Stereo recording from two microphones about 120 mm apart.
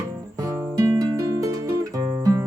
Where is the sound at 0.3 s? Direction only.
25° right (ahead or behind).